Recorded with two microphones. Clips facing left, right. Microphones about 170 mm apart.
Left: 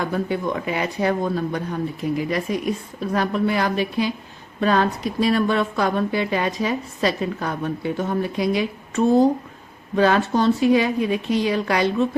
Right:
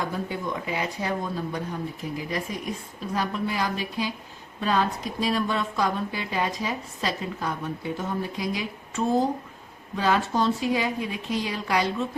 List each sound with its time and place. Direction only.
0.1 s speech: 65° left (ahead or behind)